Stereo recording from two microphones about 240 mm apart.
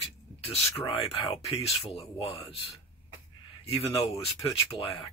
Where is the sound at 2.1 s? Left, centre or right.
Left.